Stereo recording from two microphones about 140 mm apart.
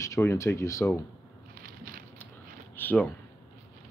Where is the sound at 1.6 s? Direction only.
90° right.